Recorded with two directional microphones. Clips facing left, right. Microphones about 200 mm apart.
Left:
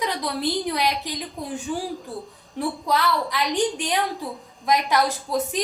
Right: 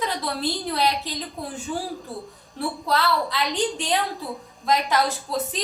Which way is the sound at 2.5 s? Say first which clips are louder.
Left 1 dB; 15° left (ahead or behind).